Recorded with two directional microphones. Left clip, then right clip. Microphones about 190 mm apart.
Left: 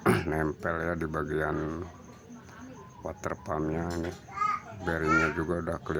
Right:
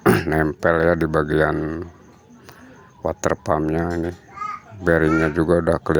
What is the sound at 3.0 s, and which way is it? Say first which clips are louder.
Speech: right 14 dB; 35° right (ahead or behind).